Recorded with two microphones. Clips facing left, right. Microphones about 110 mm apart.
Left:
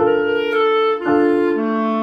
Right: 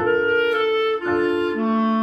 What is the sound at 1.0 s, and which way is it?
Music, 35° left (ahead or behind).